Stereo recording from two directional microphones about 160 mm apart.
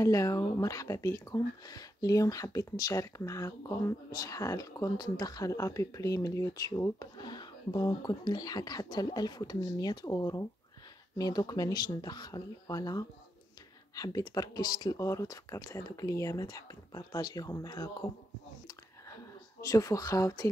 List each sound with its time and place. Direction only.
0.0 s speech: 20° left (ahead or behind)
19.6 s speech: 20° left (ahead or behind)